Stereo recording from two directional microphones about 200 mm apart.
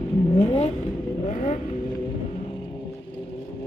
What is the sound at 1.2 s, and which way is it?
Vehicle, 35° left (ahead or behind).